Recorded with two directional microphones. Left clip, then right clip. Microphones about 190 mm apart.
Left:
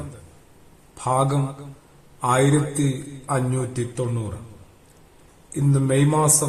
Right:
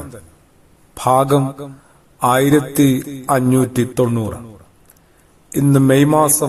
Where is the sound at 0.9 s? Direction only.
40° right (ahead or behind).